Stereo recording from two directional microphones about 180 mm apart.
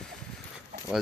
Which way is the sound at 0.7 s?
55° right (ahead or behind).